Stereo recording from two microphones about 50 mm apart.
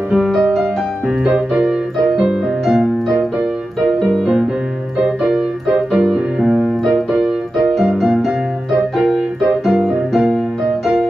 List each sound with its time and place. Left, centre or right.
0.3 s music: centre
1.5 s keyboard: centre
2.2 s music: centre
4.0 s music: centre
5.0 s keyboard: centre
5.9 s music: centre
6.4 s keyboard: centre
7.1 s keyboard: centre
7.9 s music: centre
8.9 s keyboard: centre
10.1 s music: centre